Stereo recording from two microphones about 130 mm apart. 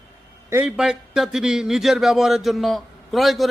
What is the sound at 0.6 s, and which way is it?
A man's voice, 5° right (ahead or behind).